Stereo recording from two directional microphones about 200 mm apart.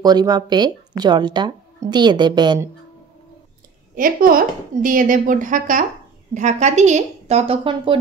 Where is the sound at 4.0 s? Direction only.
45° right (ahead or behind).